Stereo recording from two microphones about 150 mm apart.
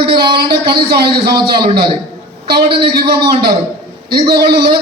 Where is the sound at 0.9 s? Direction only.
90° right.